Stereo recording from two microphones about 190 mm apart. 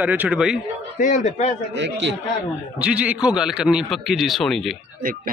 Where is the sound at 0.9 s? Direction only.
40° left (ahead or behind).